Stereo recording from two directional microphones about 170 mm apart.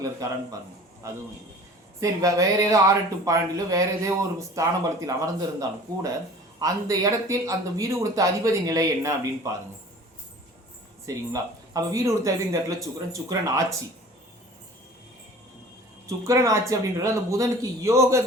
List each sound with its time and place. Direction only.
0.2 s speech: 20° right (ahead or behind)
2.0 s speech: 20° right (ahead or behind)
11.0 s speech: 20° right (ahead or behind)
16.0 s speech: 20° right (ahead or behind)